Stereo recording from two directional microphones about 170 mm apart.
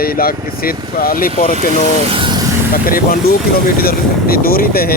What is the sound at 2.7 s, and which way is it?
Speech, 60° left (ahead or behind).